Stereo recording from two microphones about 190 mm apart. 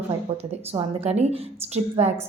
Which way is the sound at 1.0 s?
35° right (ahead or behind).